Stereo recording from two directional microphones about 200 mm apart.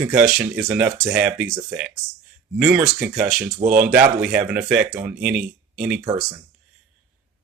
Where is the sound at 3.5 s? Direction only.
45° right (ahead or behind).